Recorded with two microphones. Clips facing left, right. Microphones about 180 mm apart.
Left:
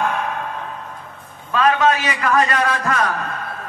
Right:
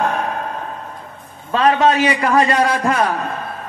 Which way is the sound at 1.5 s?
30° right (ahead or behind).